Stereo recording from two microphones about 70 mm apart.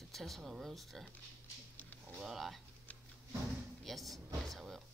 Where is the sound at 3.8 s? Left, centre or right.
Centre.